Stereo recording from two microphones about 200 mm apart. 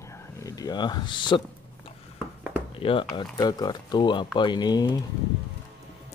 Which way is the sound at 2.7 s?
25° left (ahead or behind).